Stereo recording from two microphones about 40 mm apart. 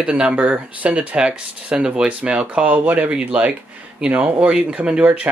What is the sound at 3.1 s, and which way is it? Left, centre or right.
Speech, right.